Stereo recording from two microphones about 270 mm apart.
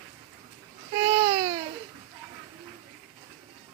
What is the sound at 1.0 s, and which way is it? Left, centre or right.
Baby cry, centre.